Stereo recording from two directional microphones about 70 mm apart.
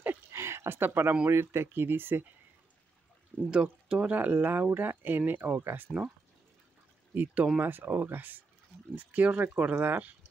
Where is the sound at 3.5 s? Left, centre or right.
Centre; by 5.9 s right.